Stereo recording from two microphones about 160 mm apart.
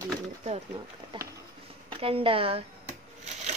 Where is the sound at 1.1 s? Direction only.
30° right (ahead or behind).